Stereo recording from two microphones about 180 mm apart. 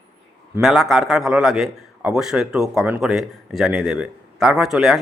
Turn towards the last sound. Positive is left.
turn(degrees=0)  # may be behind; listen again after turning